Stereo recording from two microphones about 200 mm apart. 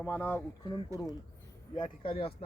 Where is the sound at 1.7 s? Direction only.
25° left (ahead or behind).